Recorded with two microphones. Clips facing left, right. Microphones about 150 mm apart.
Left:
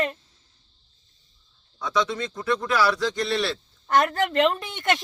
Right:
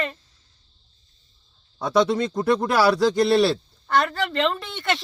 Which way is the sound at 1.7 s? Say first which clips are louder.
Right 6 dB; 35° right (ahead or behind).